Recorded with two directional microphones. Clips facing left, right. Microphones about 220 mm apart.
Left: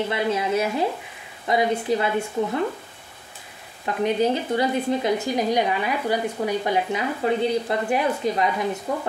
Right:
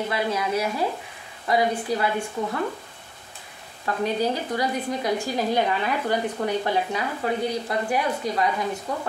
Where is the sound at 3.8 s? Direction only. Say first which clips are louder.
Left 3 dB; 20° left (ahead or behind).